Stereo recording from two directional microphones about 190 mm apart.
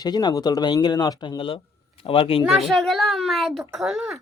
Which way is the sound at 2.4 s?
Centre (ahead or behind).